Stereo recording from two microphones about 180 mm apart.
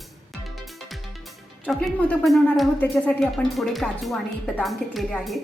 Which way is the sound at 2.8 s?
5° left (ahead or behind).